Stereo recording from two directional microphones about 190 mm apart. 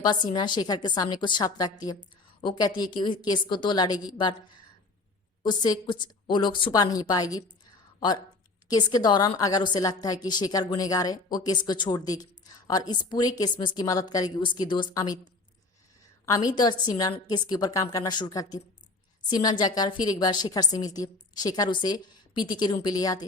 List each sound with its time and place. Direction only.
0.3 s a woman's voice: 25° left (ahead or behind)
5.4 s a woman's voice: 20° left (ahead or behind)
16.2 s a woman's voice: 20° left (ahead or behind)